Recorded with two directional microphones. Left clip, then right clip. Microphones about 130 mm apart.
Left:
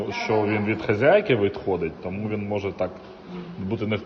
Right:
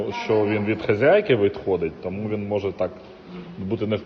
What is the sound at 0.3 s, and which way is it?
Speech, 40° left (ahead or behind).